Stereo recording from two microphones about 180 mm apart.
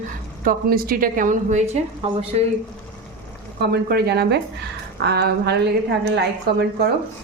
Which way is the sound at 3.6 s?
65° right (ahead or behind).